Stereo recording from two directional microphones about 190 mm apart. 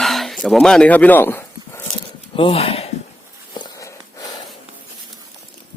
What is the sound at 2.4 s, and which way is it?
Speech, 30° left (ahead or behind).